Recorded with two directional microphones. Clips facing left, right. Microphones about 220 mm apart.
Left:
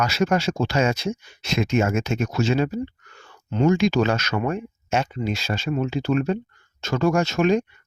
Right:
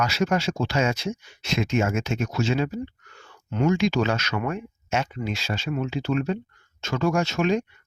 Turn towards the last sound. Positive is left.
turn(degrees=45)  # may be behind; listen again after turning